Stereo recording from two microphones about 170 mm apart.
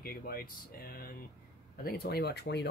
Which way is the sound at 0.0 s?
60° left (ahead or behind).